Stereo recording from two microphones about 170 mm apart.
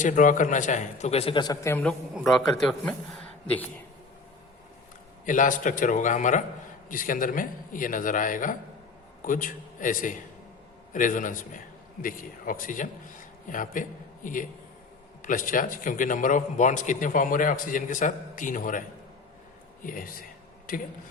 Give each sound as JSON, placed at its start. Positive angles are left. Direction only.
{"t": 0.0, "sound": "a man's voice", "side_deg": 50}
{"t": 1.7, "sound": "a man's voice", "side_deg": 10}
{"t": 5.2, "sound": "a man's voice", "side_deg": 50}
{"t": 19.8, "sound": "a man's voice", "side_deg": 55}